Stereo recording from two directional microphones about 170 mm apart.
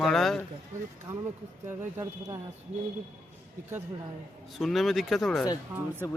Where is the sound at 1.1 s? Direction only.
15° right (ahead or behind).